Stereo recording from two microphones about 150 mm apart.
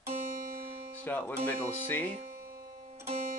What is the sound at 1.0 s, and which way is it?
Speech, 10° left (ahead or behind).